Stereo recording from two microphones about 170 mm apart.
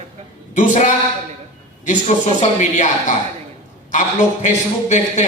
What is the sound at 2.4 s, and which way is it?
Speech, 45° left (ahead or behind).